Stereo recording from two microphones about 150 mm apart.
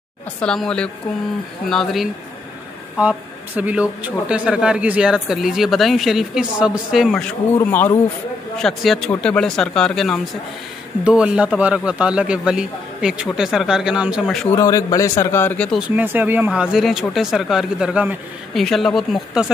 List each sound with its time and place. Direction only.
0.4 s a man's voice: 5° left (ahead or behind)
3.0 s a man's voice: 10° right (ahead or behind)
7.5 s speech: 15° left (ahead or behind)
8.5 s a man's voice: centre (ahead or behind)
11.1 s a man's voice: 5° right (ahead or behind)
14.5 s speech: 20° left (ahead or behind)
16.0 s a man's voice: 10° right (ahead or behind)